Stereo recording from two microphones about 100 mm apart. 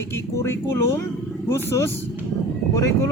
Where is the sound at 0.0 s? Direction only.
30° left (ahead or behind).